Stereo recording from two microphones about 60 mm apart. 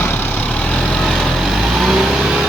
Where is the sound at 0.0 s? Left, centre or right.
Left.